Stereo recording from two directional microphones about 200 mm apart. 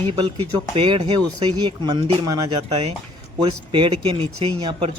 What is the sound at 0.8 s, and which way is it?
Speech, 25° right (ahead or behind).